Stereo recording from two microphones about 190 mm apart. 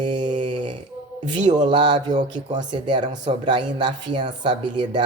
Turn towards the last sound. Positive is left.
turn(degrees=-25)  # may be behind; listen again after turning